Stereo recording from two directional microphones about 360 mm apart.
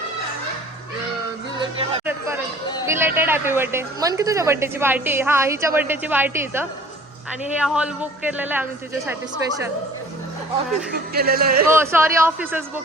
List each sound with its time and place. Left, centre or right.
2.0 s chatter: centre
2.8 s a man's voice: centre
10.9 s speech: right
11.7 s a man's voice: centre